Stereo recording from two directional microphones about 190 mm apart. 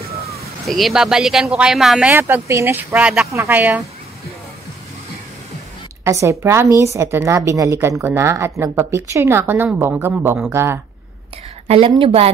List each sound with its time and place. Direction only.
0.7 s speech: centre (ahead or behind)
6.0 s a woman's voice: 15° right (ahead or behind)
11.6 s a woman's voice: 30° right (ahead or behind)